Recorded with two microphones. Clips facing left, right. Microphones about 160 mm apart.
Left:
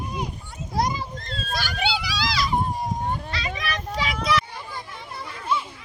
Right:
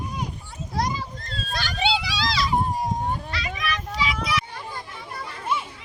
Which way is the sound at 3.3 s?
25° left (ahead or behind).